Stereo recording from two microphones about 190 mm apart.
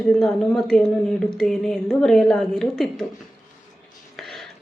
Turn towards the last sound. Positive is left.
turn(degrees=0)  # may be behind; listen again after turning